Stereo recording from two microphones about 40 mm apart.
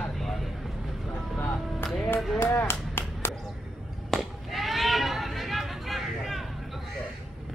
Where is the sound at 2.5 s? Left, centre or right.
Left.